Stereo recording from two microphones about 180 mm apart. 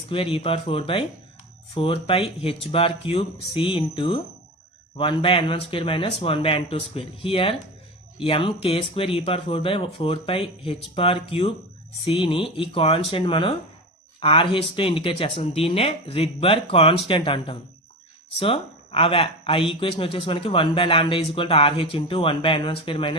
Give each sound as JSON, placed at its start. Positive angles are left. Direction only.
{"t": 0.1, "sound": "speech", "side_deg": 30}